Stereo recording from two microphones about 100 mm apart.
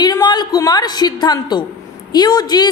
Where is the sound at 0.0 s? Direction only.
45° left (ahead or behind).